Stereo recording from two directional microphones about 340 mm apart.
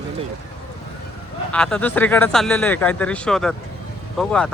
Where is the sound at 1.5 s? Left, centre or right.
Centre.